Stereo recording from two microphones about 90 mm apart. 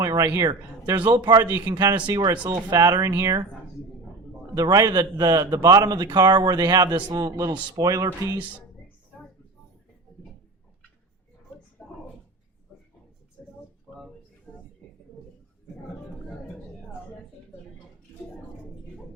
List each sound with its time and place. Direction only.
0.3 s a man's voice: 40° right (ahead or behind)
0.9 s a man's voice: 60° right (ahead or behind)
1.3 s a man's voice: 45° right (ahead or behind)
4.5 s a man's voice: 45° right (ahead or behind)
11.8 s a sound: 10° left (ahead or behind)